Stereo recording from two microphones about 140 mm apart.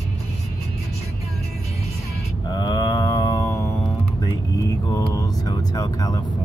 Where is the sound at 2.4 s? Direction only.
30° left (ahead or behind).